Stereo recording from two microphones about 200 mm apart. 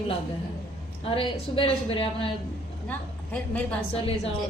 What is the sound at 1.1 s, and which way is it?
A woman's voice, 25° left (ahead or behind).